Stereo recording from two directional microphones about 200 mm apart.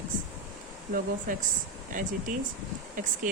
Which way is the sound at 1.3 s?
40° right (ahead or behind).